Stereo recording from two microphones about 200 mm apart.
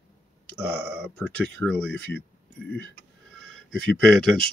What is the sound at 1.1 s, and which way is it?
Speech, 5° left (ahead or behind).